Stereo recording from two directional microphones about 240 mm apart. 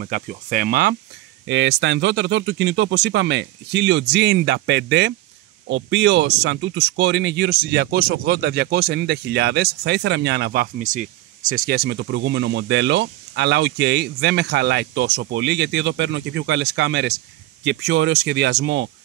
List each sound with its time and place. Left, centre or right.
0.0 s speech: right